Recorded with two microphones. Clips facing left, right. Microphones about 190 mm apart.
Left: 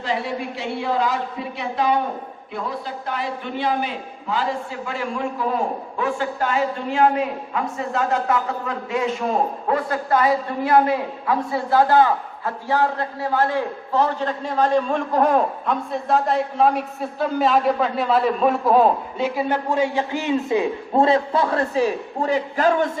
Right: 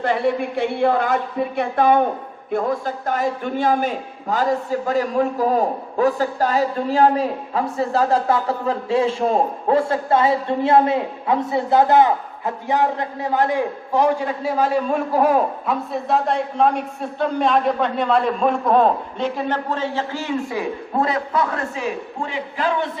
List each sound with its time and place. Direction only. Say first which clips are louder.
0.0 s a man's voice: right 5 dB; 55° right (ahead or behind); by 22.9 s 45° left (ahead or behind)